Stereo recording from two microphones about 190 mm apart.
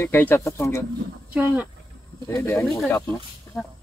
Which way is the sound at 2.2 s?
15° left (ahead or behind).